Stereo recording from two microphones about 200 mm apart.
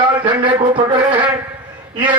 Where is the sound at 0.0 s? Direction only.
25° right (ahead or behind).